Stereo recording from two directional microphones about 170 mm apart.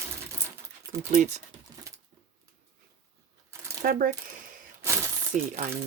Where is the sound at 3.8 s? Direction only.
55° right (ahead or behind).